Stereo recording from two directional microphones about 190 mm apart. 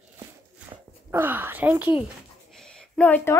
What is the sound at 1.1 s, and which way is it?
Speech, 10° right (ahead or behind).